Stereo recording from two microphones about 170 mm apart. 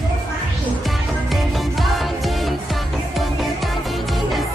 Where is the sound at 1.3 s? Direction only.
Centre (ahead or behind).